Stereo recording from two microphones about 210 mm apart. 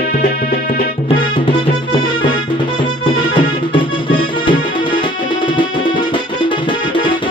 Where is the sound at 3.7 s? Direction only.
25° left (ahead or behind).